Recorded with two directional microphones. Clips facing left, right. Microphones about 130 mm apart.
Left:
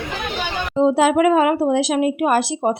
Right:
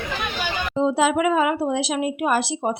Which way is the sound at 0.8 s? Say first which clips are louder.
Left 5 dB; 50° left (ahead or behind).